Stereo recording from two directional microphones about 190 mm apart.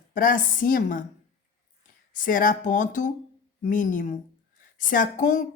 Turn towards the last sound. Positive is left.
turn(degrees=45)  # may be behind; listen again after turning